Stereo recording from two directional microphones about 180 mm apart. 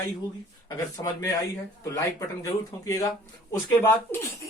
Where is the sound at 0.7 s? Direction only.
20° left (ahead or behind).